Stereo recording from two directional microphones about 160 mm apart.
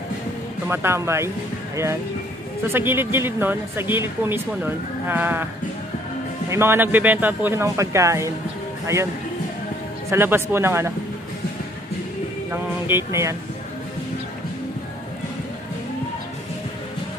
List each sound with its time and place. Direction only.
0.7 s speech: 15° right (ahead or behind)
2.6 s speech: 15° right (ahead or behind)
6.5 s speech: 15° right (ahead or behind)
10.0 s speech: 15° right (ahead or behind)
12.8 s speech: 15° right (ahead or behind)